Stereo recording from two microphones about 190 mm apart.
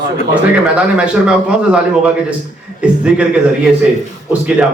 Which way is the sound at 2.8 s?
5° right (ahead or behind).